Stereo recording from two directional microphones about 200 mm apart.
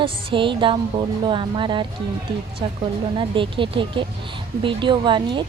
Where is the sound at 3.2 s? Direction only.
25° right (ahead or behind).